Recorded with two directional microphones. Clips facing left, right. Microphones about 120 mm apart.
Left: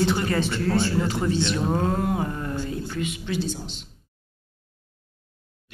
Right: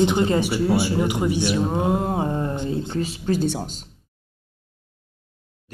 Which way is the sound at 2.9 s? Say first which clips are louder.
Right 4 dB; 35° right (ahead or behind).